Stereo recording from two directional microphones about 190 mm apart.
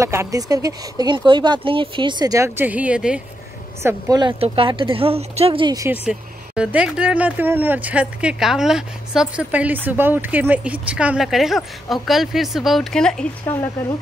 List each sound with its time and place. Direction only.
0.0 s speech: 15° right (ahead or behind)
3.8 s speech: 20° right (ahead or behind)
5.9 s speech: 5° right (ahead or behind); by 13.9 s 15° left (ahead or behind)